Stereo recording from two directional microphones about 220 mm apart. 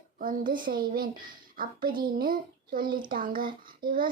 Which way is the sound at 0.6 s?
40° right (ahead or behind).